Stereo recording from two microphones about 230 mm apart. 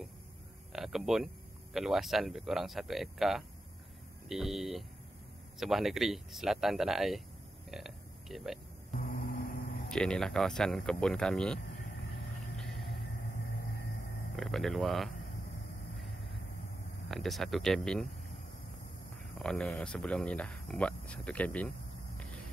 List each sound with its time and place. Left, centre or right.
0.7 s a man's voice: centre
8.9 s a sound: left
9.8 s speech: centre
14.3 s speech: centre
17.1 s speech: centre
19.3 s speech: centre